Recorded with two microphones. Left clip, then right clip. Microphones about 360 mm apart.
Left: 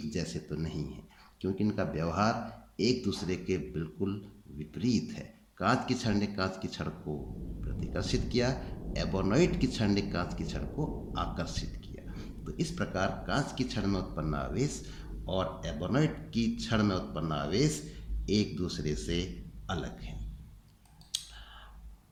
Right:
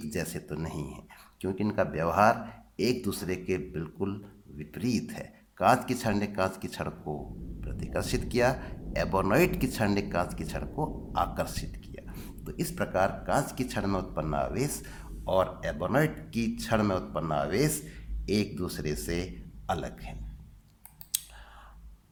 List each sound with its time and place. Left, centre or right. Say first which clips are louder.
0.1 s speech: right 4 dB; centre
21.1 s scissors: even; centre